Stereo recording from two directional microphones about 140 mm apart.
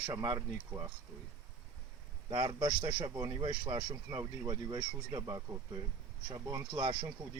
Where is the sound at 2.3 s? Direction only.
30° right (ahead or behind).